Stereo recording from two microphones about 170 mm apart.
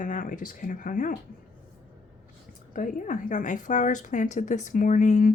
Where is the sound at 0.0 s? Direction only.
50° left (ahead or behind).